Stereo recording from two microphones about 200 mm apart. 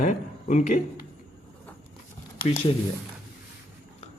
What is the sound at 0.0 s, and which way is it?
Speech, 40° left (ahead or behind).